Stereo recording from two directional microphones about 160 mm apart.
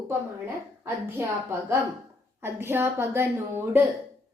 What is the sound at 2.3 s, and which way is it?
A woman's voice, 15° right (ahead or behind).